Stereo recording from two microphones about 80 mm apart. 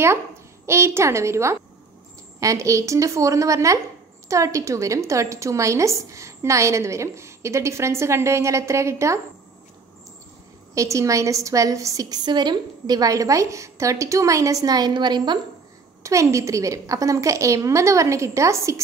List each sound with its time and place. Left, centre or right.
0.7 s a woman's voice: right
10.7 s a woman's voice: right
12.3 s a woman's voice: right
16.0 s a woman's voice: right